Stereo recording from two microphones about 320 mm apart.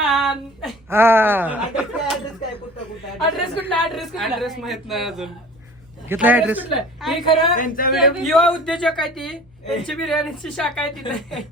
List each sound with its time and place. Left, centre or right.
0.1 s speech: centre
3.2 s speech: centre
7.5 s speech: left
7.9 s speech: centre